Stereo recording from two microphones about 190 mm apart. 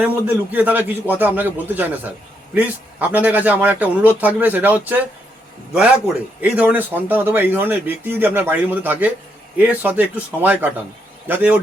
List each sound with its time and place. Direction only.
0.0 s speech: 10° right (ahead or behind)
6.4 s speech: 10° right (ahead or behind)